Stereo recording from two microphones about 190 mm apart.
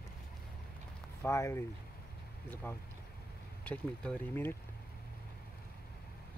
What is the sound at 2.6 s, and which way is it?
Speech, 10° left (ahead or behind).